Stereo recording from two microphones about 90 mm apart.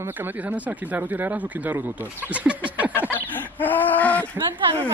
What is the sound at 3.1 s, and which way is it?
Fowl, 20° left (ahead or behind).